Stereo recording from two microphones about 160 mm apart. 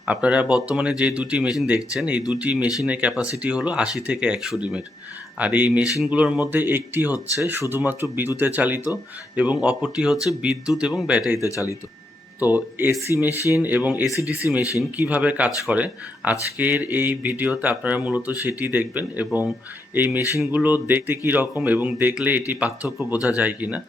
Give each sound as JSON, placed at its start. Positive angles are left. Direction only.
{"t": 0.0, "sound": "speech", "side_deg": -10}
{"t": 11.5, "sound": "speech", "side_deg": 20}
{"t": 12.4, "sound": "speech", "side_deg": -10}
{"t": 14.6, "sound": "speech", "side_deg": 20}
{"t": 15.0, "sound": "speech", "side_deg": -10}